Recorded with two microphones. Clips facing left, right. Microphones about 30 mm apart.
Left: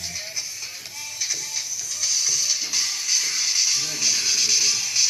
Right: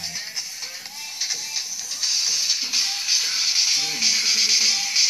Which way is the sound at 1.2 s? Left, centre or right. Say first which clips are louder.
Right 1 dB; right.